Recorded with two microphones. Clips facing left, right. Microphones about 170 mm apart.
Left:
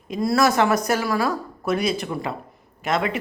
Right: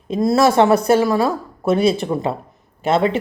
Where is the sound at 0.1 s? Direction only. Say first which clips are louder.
Right 5 dB; 25° right (ahead or behind).